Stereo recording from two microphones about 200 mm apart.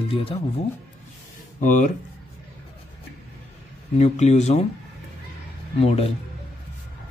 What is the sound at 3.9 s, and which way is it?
Speech, 35° left (ahead or behind).